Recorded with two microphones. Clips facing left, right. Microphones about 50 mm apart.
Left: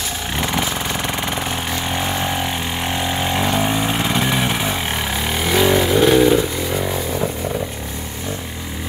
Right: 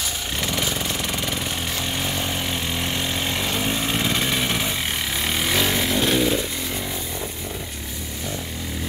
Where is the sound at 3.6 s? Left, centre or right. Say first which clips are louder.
Left 4 dB; centre.